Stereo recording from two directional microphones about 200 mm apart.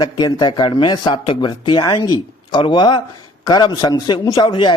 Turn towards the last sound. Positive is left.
turn(degrees=20)  # may be behind; listen again after turning